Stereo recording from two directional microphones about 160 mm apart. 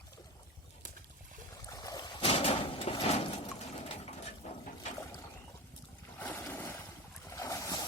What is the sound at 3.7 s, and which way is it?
Pigeon, 45° left (ahead or behind).